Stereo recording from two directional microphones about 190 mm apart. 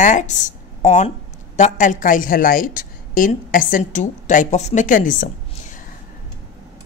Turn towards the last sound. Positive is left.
turn(degrees=45)  # may be behind; listen again after turning